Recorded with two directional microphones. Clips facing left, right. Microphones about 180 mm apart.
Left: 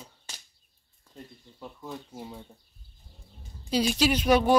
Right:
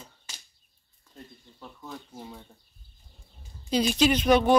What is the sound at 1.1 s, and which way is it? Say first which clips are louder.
Speech: left 1 dB; 10° left (ahead or behind).